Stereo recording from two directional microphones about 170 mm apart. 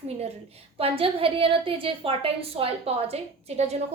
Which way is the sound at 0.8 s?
35° right (ahead or behind).